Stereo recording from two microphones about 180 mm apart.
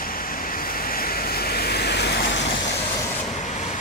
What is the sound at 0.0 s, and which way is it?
Waves, 55° left (ahead or behind).